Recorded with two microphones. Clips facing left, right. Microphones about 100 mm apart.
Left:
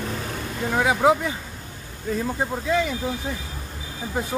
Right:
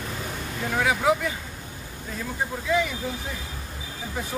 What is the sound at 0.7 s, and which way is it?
Speech, 25° left (ahead or behind).